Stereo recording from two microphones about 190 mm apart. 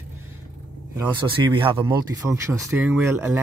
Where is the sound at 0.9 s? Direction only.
25° right (ahead or behind).